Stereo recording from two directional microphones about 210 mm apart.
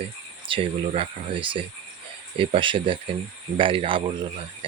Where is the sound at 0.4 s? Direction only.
25° right (ahead or behind).